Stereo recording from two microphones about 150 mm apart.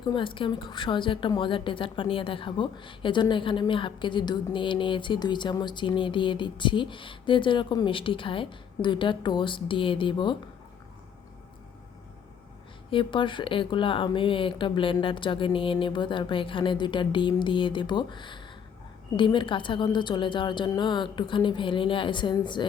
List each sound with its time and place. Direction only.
0.0 s a woman's voice: 30° left (ahead or behind)
12.9 s a woman's voice: 35° left (ahead or behind)